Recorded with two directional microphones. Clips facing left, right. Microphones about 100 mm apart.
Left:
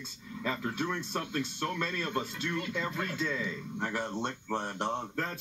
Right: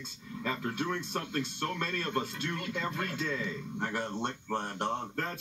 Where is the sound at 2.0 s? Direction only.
15° left (ahead or behind).